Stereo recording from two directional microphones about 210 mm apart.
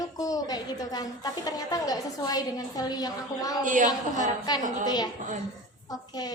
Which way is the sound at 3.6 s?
40° right (ahead or behind).